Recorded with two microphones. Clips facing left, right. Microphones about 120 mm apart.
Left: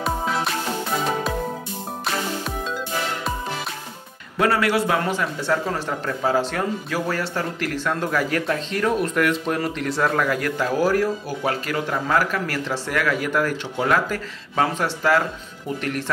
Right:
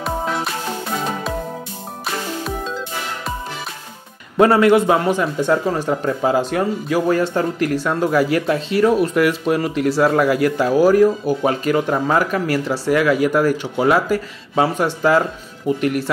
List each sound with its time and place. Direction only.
0.0 s music: centre (ahead or behind)
2.0 s music: centre (ahead or behind)
4.4 s speech: 25° right (ahead or behind)